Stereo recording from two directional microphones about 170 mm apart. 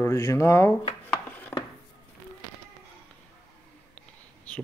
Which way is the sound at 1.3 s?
10° left (ahead or behind).